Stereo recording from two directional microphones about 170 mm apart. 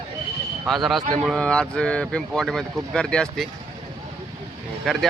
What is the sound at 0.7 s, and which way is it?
Speech, centre (ahead or behind).